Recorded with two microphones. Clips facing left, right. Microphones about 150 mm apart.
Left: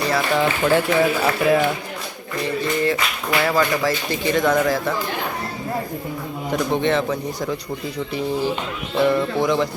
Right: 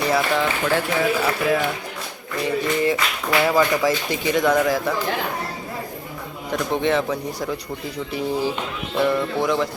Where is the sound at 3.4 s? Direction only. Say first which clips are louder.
Right 1 dB; 10° right (ahead or behind).